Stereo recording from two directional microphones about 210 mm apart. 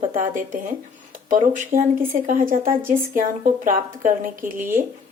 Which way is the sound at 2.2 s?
40° right (ahead or behind).